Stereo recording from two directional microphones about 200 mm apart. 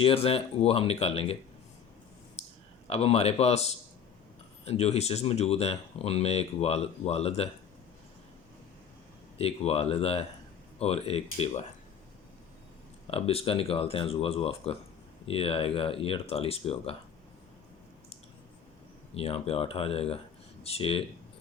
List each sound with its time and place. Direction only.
0.0 s speech: 30° left (ahead or behind)
2.4 s clicking: 35° left (ahead or behind)
2.8 s speech: 30° left (ahead or behind)
9.4 s speech: 30° left (ahead or behind)
13.1 s speech: 30° left (ahead or behind)
19.1 s speech: 30° left (ahead or behind)